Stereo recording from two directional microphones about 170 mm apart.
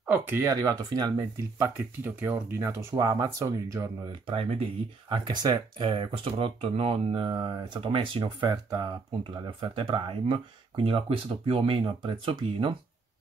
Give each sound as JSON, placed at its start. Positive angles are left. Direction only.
{"t": 0.0, "sound": "speech", "side_deg": -10}
{"t": 4.3, "sound": "speech", "side_deg": -35}